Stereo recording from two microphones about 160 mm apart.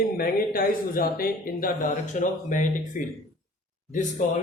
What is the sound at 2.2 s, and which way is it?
Speech, 55° left (ahead or behind).